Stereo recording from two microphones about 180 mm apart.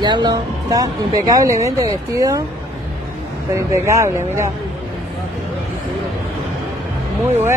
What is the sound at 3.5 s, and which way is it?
Speech, 15° right (ahead or behind).